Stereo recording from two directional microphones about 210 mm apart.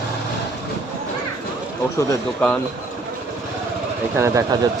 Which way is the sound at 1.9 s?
5° left (ahead or behind).